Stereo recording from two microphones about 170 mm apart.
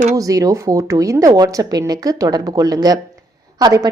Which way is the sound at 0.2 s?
20° right (ahead or behind).